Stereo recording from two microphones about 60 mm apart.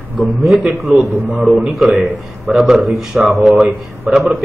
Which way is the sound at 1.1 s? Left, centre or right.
Right.